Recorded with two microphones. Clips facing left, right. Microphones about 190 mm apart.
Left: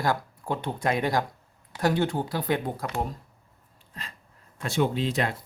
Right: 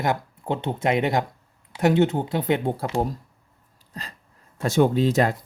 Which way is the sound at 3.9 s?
40° right (ahead or behind).